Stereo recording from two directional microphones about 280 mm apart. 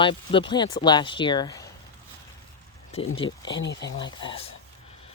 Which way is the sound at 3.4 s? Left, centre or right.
Left.